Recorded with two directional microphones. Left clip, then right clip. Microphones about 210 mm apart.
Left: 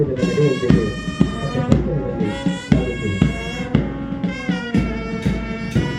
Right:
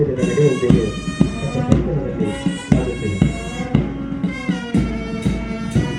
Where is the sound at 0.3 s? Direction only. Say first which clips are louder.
Right 3 dB; 20° right (ahead or behind).